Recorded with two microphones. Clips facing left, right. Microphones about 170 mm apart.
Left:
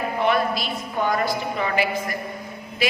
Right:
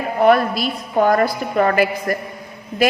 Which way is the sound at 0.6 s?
45° right (ahead or behind).